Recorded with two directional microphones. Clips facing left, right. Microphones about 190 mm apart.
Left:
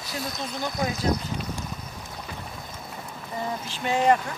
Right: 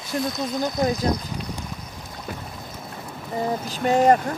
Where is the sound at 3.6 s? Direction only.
40° right (ahead or behind).